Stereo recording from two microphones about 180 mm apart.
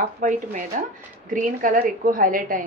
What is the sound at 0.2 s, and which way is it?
A woman's voice, 45° right (ahead or behind).